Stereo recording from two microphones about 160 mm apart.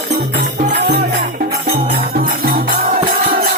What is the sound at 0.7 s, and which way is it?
Music, 90° right.